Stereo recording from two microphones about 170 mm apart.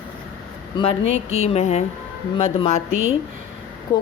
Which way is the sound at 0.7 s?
30° left (ahead or behind).